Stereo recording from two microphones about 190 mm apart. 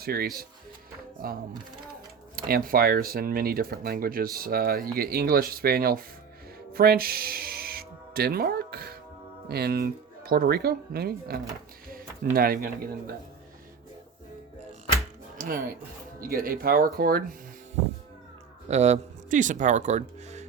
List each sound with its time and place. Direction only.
0.0 s speech: 55° right (ahead or behind)
2.3 s speech: 50° right (ahead or behind)
6.7 s music: 50° right (ahead or behind)
9.5 s speech: 55° right (ahead or behind)
11.9 s a sound: 50° right (ahead or behind)
15.4 s speech: 50° right (ahead or behind)
18.7 s speech: 35° right (ahead or behind)